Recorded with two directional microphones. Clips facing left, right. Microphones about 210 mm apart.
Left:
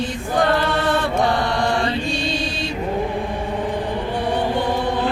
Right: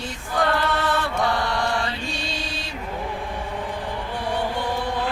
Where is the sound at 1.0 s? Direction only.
20° left (ahead or behind).